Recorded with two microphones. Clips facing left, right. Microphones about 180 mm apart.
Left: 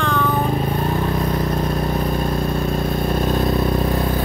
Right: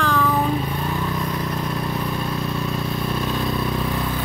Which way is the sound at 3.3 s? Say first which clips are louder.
Left 5 dB; 45° left (ahead or behind).